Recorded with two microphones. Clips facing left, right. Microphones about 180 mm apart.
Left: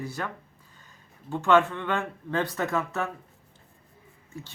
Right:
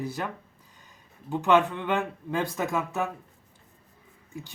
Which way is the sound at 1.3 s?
15° right (ahead or behind).